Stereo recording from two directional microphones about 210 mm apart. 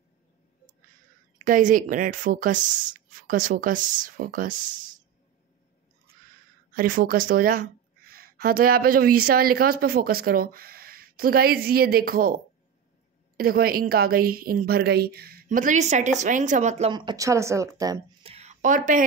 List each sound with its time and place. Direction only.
1.4 s speech: 40° right (ahead or behind)
6.7 s a woman's voice: 40° right (ahead or behind)
13.4 s a woman's voice: 45° right (ahead or behind)
16.9 s speech: 20° right (ahead or behind)
18.2 s a sound: 30° right (ahead or behind)